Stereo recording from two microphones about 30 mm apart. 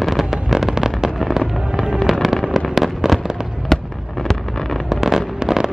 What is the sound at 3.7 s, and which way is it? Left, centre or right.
Fireworks, centre.